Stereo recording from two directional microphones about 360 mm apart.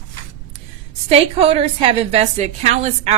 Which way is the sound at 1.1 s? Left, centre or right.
Centre.